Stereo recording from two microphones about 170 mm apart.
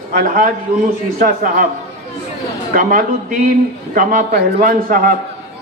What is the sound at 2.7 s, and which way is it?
A man's voice, 55° right (ahead or behind).